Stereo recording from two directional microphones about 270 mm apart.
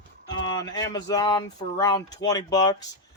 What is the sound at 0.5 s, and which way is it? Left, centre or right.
Speech, centre.